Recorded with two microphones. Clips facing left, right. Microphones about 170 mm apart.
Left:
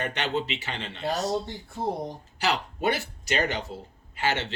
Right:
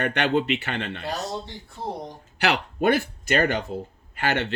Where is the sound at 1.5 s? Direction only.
45° left (ahead or behind).